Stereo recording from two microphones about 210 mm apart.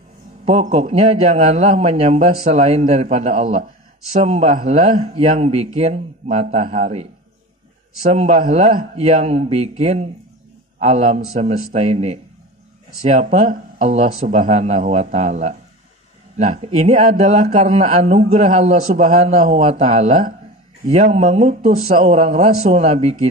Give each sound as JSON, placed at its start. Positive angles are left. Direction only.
{"t": 0.5, "sound": "a man's voice", "side_deg": -30}
{"t": 8.1, "sound": "a man's voice", "side_deg": -35}